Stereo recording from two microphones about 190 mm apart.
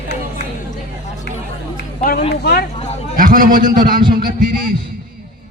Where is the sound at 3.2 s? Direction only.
45° right (ahead or behind).